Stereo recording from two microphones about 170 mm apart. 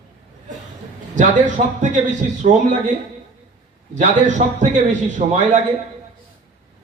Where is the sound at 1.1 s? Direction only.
45° right (ahead or behind).